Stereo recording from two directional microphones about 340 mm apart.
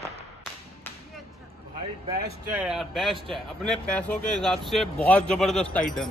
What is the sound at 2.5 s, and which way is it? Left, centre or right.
Speech, centre.